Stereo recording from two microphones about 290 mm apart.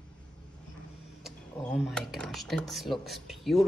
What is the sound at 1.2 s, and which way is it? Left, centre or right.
Speech, centre.